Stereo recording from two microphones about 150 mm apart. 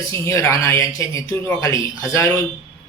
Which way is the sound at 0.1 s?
20° left (ahead or behind).